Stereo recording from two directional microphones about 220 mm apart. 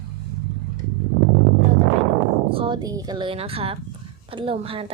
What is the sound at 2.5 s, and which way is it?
A woman's voice, 20° right (ahead or behind).